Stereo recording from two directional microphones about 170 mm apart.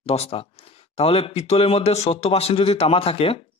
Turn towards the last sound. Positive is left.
turn(degrees=35)  # may be behind; listen again after turning